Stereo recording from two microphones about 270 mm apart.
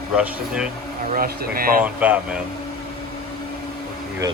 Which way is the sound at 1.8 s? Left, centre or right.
Centre.